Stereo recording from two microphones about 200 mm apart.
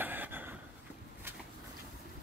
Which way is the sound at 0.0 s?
10° right (ahead or behind).